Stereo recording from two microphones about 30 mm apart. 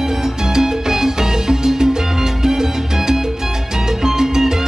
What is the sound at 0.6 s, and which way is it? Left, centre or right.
Music, centre.